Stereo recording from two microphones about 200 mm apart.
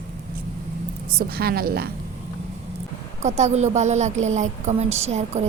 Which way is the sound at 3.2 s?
35° right (ahead or behind).